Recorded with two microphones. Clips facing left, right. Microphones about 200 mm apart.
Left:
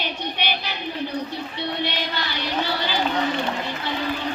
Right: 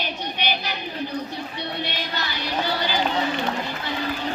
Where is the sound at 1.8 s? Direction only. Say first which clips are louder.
Left 2 dB; 45° right (ahead or behind).